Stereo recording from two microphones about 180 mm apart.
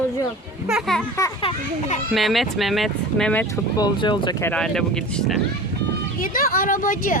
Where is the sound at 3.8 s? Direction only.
25° left (ahead or behind).